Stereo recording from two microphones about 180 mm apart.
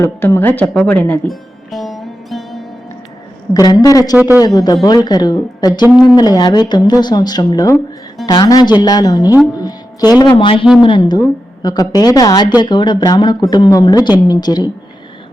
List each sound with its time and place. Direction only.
0.0 s music: 15° left (ahead or behind)
3.5 s speech: 20° left (ahead or behind)
4.2 s speech: 10° right (ahead or behind)
4.4 s speech: 20° left (ahead or behind)